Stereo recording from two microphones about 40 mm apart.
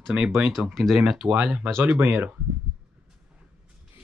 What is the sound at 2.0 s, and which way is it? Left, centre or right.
Speech, right.